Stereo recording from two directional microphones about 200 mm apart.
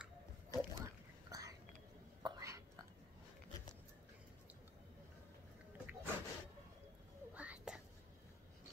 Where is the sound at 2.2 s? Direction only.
15° right (ahead or behind).